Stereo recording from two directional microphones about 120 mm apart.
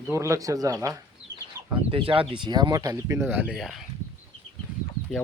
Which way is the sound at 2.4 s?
35° right (ahead or behind).